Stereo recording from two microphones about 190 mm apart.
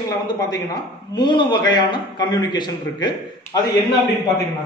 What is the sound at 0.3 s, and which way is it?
A man's voice, 20° left (ahead or behind).